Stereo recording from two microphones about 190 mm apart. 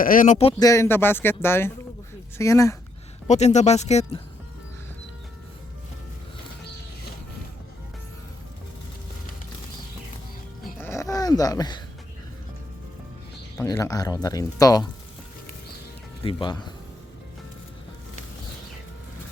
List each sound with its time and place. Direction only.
0.0 s speech: 45° left (ahead or behind)
0.6 s speech: 15° left (ahead or behind)
3.2 s speech: 35° left (ahead or behind)
10.8 s a sound: 15° left (ahead or behind)
13.6 s speech: 15° left (ahead or behind)
16.2 s speech: 25° left (ahead or behind)